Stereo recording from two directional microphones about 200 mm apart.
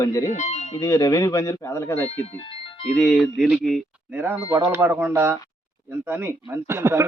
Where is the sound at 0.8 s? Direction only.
15° left (ahead or behind).